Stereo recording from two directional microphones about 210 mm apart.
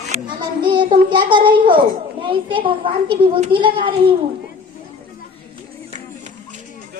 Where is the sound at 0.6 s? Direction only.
20° right (ahead or behind).